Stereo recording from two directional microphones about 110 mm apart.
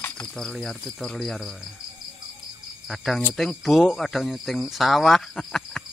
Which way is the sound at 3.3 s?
Centre (ahead or behind).